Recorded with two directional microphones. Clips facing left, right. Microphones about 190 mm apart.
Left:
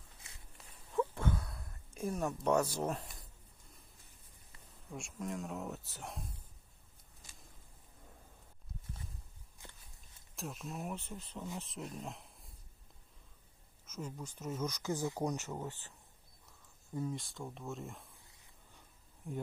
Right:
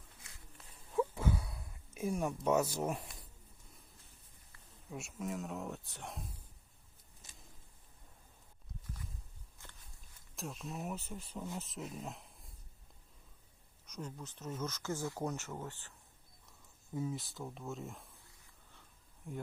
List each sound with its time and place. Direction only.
0.9 s a sound: 10° right (ahead or behind)
2.6 s speech: 10° right (ahead or behind)
4.9 s speech: 5° right (ahead or behind)
8.8 s a sound: 25° left (ahead or behind)
9.6 s walk: 15° left (ahead or behind)
10.3 s speech: centre (ahead or behind)
13.8 s speech: 5° left (ahead or behind)
16.9 s speech: 5° right (ahead or behind)
18.2 s a sound: 20° left (ahead or behind)